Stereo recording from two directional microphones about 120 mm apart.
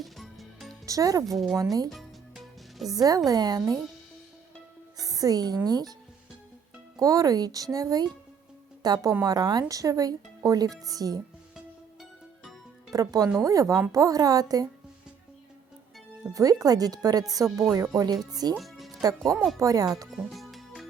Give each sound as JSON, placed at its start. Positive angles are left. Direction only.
{"t": 0.0, "sound": "music", "side_deg": 0}
{"t": 0.9, "sound": "speech", "side_deg": -30}
{"t": 1.9, "sound": "music", "side_deg": 0}
{"t": 2.9, "sound": "speech", "side_deg": -30}
{"t": 4.9, "sound": "music", "side_deg": -30}
{"t": 5.6, "sound": "speech", "side_deg": -35}
{"t": 6.9, "sound": "speech", "side_deg": -30}
{"t": 12.9, "sound": "speech", "side_deg": -30}
{"t": 16.3, "sound": "speech", "side_deg": -30}
{"t": 18.5, "sound": "music", "side_deg": 0}
{"t": 19.5, "sound": "speech", "side_deg": -30}
{"t": 20.1, "sound": "music", "side_deg": 0}